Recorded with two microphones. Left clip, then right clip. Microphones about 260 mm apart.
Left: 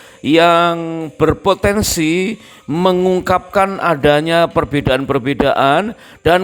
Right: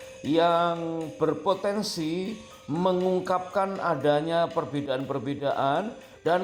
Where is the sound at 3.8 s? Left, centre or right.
Left.